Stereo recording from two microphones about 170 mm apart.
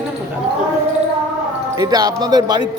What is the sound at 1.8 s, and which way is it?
Speech, 25° right (ahead or behind).